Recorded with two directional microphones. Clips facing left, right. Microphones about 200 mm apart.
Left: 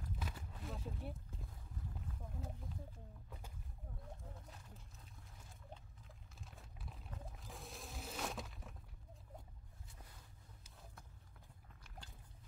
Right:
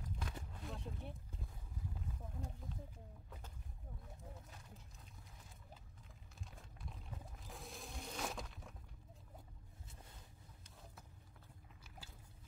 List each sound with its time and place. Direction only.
0.0 s a sound: 5° left (ahead or behind)
6.4 s music: centre (ahead or behind)
10.6 s vehicle: centre (ahead or behind)